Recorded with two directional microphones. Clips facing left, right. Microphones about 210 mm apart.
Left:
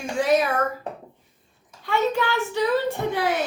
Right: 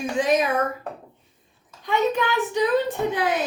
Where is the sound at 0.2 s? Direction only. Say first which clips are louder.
Left 1 dB; 20° right (ahead or behind).